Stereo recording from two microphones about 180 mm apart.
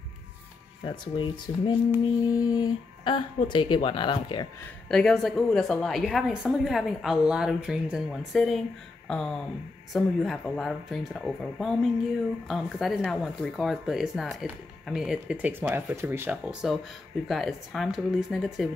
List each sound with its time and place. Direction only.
0.8 s speech: 25° left (ahead or behind)
2.2 s a sound: 20° left (ahead or behind)
3.4 s speech: 25° left (ahead or behind)
4.8 s speech: 5° left (ahead or behind)